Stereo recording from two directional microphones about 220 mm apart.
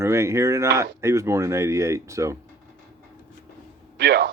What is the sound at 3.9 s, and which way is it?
Speech, 50° right (ahead or behind).